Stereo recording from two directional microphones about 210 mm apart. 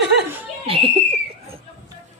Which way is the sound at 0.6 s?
25° right (ahead or behind).